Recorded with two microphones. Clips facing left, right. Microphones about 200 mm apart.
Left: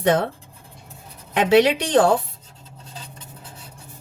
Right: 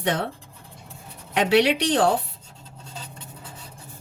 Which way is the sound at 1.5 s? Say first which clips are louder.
Left 4 dB; 55° left (ahead or behind).